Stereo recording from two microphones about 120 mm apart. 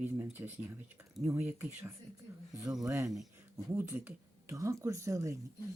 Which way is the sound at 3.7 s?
20° right (ahead or behind).